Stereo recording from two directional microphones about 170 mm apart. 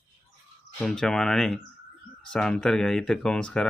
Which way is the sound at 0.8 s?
5° left (ahead or behind).